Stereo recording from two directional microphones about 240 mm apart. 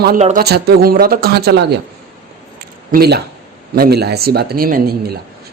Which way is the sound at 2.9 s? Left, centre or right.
Right.